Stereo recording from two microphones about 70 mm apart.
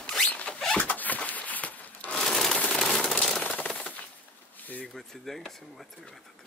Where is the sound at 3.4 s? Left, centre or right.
Centre.